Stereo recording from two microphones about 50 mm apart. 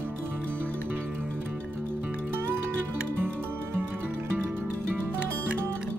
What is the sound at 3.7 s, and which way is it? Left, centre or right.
Music, right.